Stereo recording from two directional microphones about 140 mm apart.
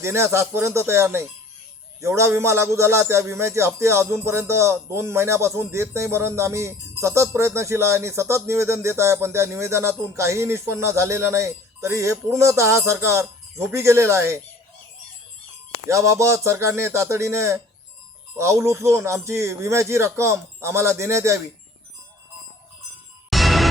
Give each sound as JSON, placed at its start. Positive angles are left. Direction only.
{"t": 0.0, "sound": "a man's voice", "side_deg": -20}
{"t": 15.9, "sound": "a man's voice", "side_deg": -20}
{"t": 23.3, "sound": "music", "side_deg": 0}